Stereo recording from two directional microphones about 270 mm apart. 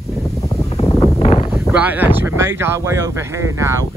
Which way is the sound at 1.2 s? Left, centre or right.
Left.